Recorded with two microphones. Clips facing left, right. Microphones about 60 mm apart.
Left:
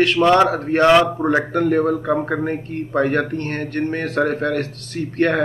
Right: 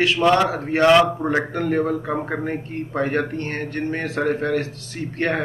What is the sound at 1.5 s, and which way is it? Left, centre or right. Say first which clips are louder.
Speech: left 4 dB; left.